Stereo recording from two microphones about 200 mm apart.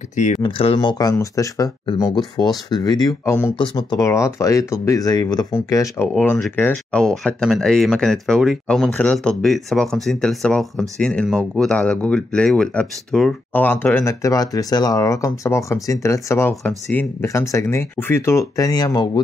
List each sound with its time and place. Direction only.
0.1 s speech: 35° left (ahead or behind)
0.4 s speech: 25° left (ahead or behind)